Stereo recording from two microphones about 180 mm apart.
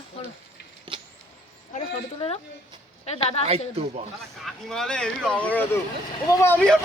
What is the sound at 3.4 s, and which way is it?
Speech, 35° right (ahead or behind).